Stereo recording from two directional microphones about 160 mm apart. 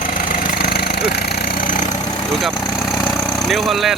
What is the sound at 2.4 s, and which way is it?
Vehicle, centre (ahead or behind).